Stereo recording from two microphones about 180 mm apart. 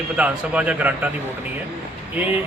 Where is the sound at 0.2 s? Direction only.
5° right (ahead or behind).